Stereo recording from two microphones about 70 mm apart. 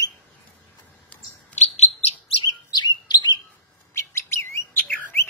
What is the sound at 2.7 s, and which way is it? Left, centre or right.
Chirp, left.